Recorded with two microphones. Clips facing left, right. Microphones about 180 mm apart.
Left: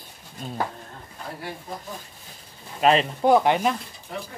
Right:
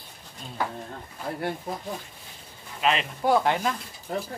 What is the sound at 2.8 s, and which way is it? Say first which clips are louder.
Speech: left 6 dB; 40° left (ahead or behind).